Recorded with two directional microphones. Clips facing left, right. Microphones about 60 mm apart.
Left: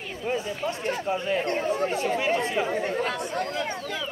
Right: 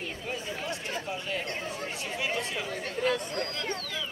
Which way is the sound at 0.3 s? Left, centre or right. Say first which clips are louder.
Left 8 dB; left.